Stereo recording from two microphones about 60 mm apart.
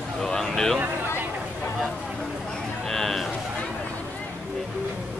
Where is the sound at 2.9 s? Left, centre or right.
Centre.